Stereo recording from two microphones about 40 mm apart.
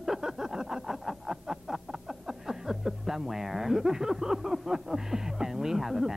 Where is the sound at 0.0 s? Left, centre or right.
Centre.